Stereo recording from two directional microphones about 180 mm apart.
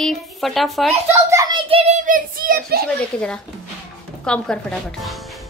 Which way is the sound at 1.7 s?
35° right (ahead or behind).